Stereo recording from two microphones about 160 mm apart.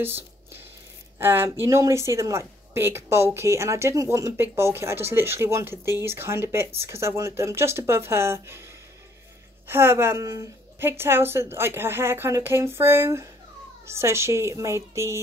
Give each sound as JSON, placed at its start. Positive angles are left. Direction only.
{"t": 0.0, "sound": "a woman's voice", "side_deg": -15}
{"t": 9.7, "sound": "a woman's voice", "side_deg": -15}